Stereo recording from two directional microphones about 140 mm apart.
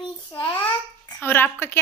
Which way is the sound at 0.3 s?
35° left (ahead or behind).